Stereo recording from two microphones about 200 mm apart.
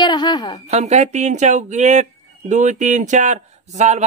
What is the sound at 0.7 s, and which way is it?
Speech, 35° right (ahead or behind).